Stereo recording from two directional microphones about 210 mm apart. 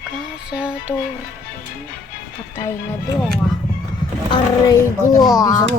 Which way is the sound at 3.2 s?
Centre (ahead or behind).